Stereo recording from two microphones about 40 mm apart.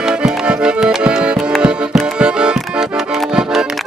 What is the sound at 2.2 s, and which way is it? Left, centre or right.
Music, right.